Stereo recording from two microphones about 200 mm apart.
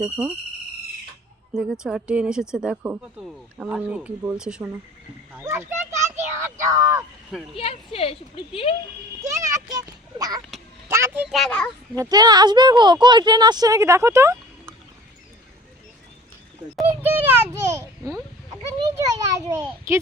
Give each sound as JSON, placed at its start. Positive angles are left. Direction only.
{"t": 0.0, "sound": "speech", "side_deg": -5}
{"t": 1.5, "sound": "speech", "side_deg": -5}
{"t": 7.5, "sound": "speech", "side_deg": 30}
{"t": 9.2, "sound": "a sound", "side_deg": -15}
{"t": 10.8, "sound": "speech", "side_deg": -10}
{"t": 11.9, "sound": "speech", "side_deg": -20}
{"t": 16.9, "sound": "a sound", "side_deg": -10}
{"t": 18.6, "sound": "children playing", "side_deg": -15}
{"t": 19.6, "sound": "speech", "side_deg": -15}